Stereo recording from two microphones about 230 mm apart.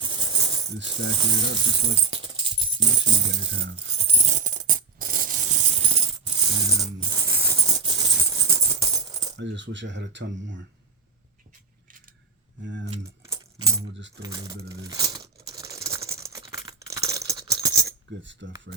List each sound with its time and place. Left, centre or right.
0.0 s coin: centre
1.2 s speech: centre
3.3 s speech: right
3.9 s music: right
6.8 s maraca: centre
9.4 s speech: right
11.9 s keys jangling: right
12.6 s speech: right
13.7 s coin: right
14.2 s speech: centre
14.8 s a sound: centre
16.9 s rattle: centre
18.2 s speech: right